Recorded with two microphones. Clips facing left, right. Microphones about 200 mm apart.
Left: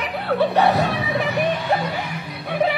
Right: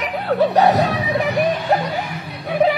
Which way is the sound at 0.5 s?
40° right (ahead or behind).